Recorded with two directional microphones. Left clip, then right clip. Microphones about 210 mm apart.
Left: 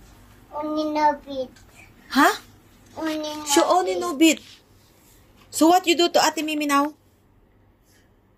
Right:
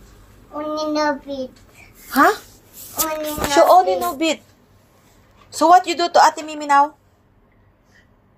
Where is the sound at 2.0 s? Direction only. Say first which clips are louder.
Right 4 dB; 55° left (ahead or behind).